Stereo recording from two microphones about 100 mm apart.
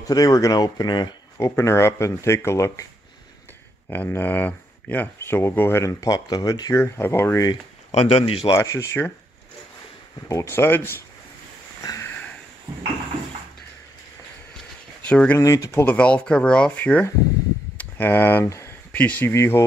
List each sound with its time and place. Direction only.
0.0 s speech: 35° left (ahead or behind)
1.6 s speech: 30° left (ahead or behind)
3.9 s speech: 20° left (ahead or behind); by 6.7 s 40° left (ahead or behind)
6.7 s speech: 25° left (ahead or behind)
7.9 s speech: 85° left; by 8.5 s 70° left (ahead or behind)
8.5 s speech: 30° left (ahead or behind)
10.2 s speech: 30° left (ahead or behind)
11.8 s sniff: 35° left (ahead or behind)
15.0 s speech: 15° left (ahead or behind)
15.3 s speech: 35° left (ahead or behind)
15.7 s speech: 15° left (ahead or behind)
17.7 s a sound: 20° left (ahead or behind)
18.9 s speech: 15° left (ahead or behind)